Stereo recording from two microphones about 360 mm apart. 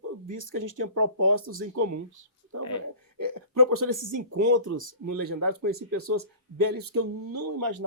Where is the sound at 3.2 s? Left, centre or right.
Right.